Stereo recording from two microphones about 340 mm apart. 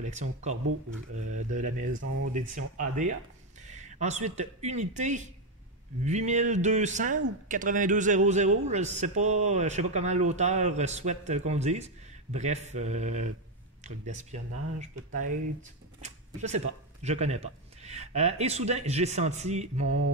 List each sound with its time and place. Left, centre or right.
0.0 s speech: right
16.0 s speech: centre